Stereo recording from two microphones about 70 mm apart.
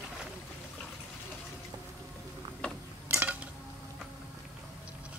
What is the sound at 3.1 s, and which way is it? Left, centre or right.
Dishes, right.